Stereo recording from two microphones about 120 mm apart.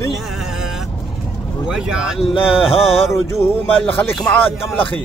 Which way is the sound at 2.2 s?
55° left (ahead or behind).